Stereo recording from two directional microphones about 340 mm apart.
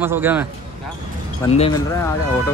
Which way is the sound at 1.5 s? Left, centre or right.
Centre.